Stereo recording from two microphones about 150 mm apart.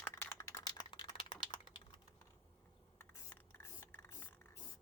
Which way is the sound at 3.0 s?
15° left (ahead or behind).